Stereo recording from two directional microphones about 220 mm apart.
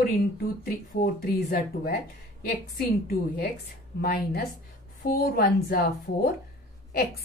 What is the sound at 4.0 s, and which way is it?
A woman's voice, 45° left (ahead or behind).